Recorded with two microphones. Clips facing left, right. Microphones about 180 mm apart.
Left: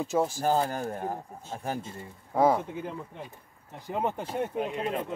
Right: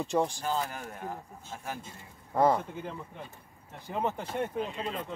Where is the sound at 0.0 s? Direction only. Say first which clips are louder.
Left 1 dB; 5° left (ahead or behind).